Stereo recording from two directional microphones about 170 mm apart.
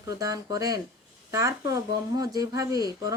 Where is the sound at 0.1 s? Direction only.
20° right (ahead or behind).